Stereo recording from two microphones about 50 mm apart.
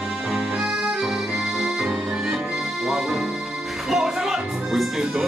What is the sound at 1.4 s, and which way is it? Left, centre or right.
Accordion, centre.